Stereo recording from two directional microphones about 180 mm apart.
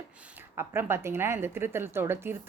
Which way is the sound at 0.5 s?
15° right (ahead or behind).